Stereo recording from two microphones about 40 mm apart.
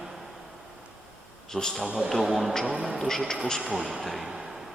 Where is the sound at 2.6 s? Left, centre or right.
Right.